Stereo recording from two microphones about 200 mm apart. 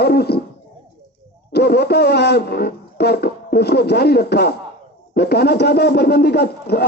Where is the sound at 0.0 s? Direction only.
55° left (ahead or behind).